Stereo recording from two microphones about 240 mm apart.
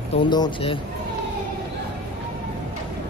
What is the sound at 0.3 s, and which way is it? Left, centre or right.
Speech, centre.